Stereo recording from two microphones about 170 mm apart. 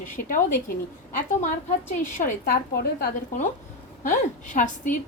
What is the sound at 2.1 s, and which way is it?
Speech, 55° left (ahead or behind).